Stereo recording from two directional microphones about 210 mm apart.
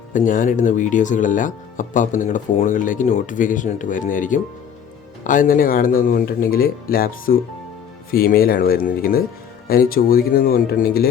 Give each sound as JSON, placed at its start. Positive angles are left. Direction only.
{"t": 0.3, "sound": "speech", "side_deg": 40}